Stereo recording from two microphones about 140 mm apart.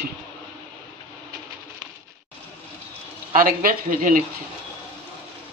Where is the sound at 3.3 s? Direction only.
90° right.